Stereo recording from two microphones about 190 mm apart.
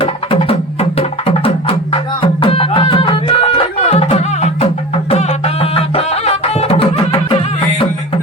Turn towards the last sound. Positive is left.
turn(degrees=30)  # may be behind; listen again after turning